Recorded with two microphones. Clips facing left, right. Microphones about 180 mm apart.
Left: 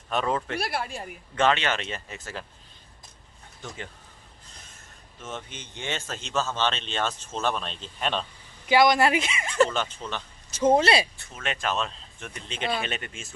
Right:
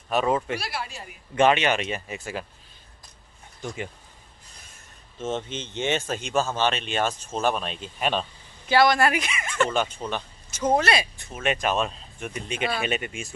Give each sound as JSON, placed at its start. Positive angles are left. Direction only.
{"t": 0.1, "sound": "speech", "side_deg": -10}
{"t": 0.6, "sound": "speech", "side_deg": 55}
{"t": 1.3, "sound": "speech", "side_deg": -15}
{"t": 3.6, "sound": "speech", "side_deg": -10}
{"t": 5.2, "sound": "speech", "side_deg": -25}
{"t": 8.6, "sound": "speech", "side_deg": 15}
{"t": 10.0, "sound": "speech", "side_deg": -25}
{"t": 10.8, "sound": "speech", "side_deg": 30}
{"t": 11.1, "sound": "speech", "side_deg": -15}